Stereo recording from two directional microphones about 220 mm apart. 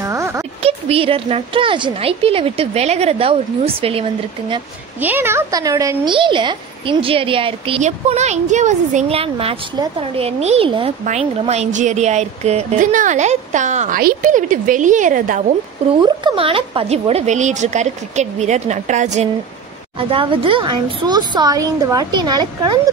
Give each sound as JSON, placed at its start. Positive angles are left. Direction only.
{"t": 0.0, "sound": "a sound", "side_deg": -15}
{"t": 0.6, "sound": "a woman's voice", "side_deg": -25}
{"t": 5.0, "sound": "a woman's voice", "side_deg": -10}
{"t": 16.0, "sound": "a woman's voice", "side_deg": -20}